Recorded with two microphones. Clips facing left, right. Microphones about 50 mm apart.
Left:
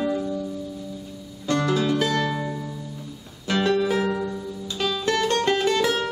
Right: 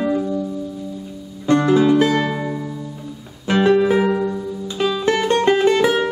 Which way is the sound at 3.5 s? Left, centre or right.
Right.